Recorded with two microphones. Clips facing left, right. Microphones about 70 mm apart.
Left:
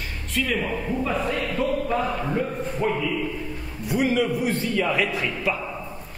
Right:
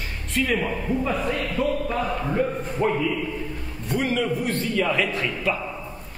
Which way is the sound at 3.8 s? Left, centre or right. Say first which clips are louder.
Left 2 dB; centre.